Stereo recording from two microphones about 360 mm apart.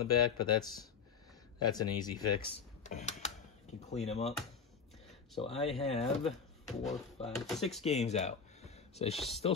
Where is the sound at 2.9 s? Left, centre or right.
Centre.